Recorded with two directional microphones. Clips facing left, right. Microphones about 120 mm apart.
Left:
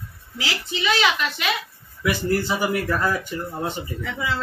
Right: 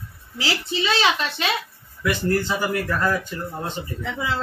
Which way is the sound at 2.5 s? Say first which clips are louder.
Left 1 dB; 15° left (ahead or behind).